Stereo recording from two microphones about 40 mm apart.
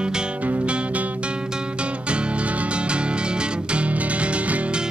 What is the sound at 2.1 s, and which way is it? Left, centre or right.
Music, right.